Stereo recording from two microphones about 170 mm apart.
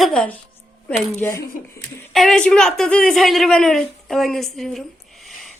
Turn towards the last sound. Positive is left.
turn(degrees=0)  # may be behind; listen again after turning